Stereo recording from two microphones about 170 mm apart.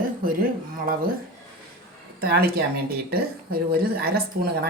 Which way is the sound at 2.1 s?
65° right (ahead or behind).